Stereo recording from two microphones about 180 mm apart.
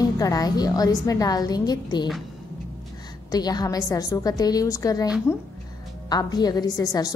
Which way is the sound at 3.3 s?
20° left (ahead or behind).